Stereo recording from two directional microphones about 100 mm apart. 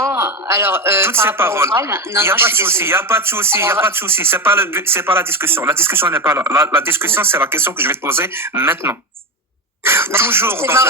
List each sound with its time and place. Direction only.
0.0 s a man's voice: 30° right (ahead or behind)